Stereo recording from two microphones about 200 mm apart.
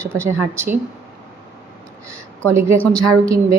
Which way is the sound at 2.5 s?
15° right (ahead or behind).